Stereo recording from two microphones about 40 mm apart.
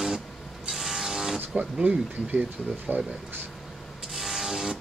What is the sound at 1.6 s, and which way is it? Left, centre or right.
Speech, right.